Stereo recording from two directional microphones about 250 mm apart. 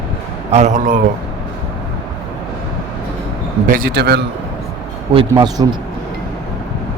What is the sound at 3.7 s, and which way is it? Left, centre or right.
Speech, right.